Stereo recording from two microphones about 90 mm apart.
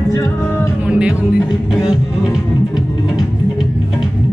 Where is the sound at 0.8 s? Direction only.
10° right (ahead or behind).